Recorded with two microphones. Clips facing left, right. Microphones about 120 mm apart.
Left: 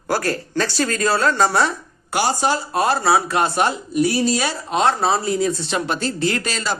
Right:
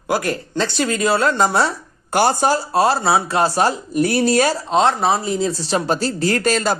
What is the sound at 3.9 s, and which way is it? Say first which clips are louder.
Speech: right 3 dB; 55° right (ahead or behind).